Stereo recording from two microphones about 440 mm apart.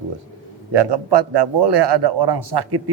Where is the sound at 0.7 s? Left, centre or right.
Right.